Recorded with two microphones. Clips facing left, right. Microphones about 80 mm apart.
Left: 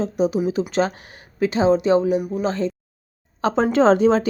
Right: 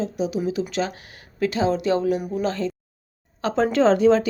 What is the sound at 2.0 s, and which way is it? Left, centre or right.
Speech, centre.